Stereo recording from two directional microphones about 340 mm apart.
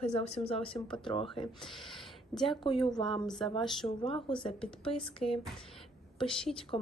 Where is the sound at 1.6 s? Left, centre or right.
Centre.